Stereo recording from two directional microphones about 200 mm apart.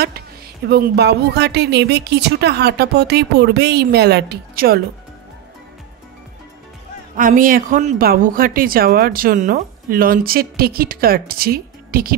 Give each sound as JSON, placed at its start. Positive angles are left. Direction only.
{"t": 0.7, "sound": "speech", "side_deg": -55}
{"t": 7.2, "sound": "speech", "side_deg": -45}